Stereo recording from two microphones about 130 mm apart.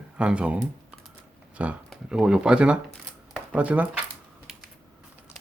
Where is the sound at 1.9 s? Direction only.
5° right (ahead or behind).